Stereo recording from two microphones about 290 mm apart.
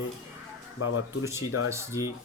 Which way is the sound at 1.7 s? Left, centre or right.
Centre.